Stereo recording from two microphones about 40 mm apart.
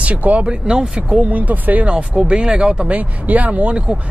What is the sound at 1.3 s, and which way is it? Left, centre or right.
Speech, right.